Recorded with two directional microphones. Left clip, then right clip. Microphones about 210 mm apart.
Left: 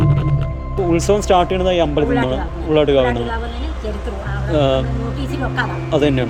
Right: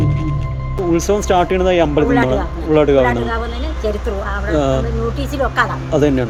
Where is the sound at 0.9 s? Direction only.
10° left (ahead or behind).